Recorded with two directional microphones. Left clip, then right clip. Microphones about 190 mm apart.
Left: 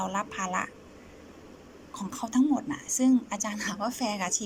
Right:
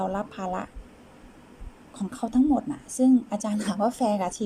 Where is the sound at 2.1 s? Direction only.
25° right (ahead or behind).